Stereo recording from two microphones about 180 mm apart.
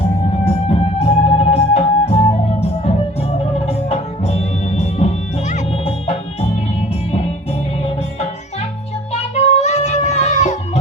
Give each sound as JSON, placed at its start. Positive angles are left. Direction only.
{"t": 0.4, "sound": "music", "side_deg": 35}
{"t": 9.1, "sound": "music", "side_deg": 35}